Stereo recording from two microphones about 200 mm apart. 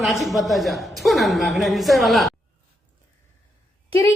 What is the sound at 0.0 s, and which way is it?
A woman's voice, centre (ahead or behind).